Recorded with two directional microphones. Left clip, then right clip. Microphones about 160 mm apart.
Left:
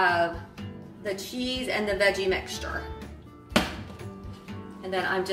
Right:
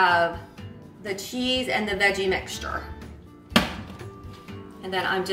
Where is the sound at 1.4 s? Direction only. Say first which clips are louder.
Right 6 dB; 15° left (ahead or behind).